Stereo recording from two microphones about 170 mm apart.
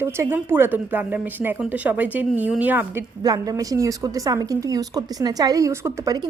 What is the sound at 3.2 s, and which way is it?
A woman's voice, 20° right (ahead or behind).